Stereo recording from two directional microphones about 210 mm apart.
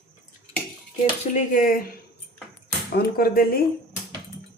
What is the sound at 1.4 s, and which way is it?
Speech, 40° left (ahead or behind).